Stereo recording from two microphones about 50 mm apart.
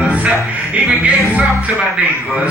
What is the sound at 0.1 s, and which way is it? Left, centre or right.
Music, right.